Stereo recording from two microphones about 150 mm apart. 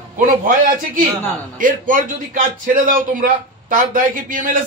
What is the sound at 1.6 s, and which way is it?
A man's voice, 65° right (ahead or behind).